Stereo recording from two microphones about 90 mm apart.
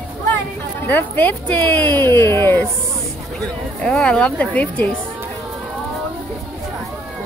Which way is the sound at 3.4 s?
10° left (ahead or behind).